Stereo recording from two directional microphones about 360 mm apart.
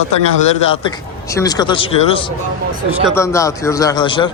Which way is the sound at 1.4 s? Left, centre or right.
Centre.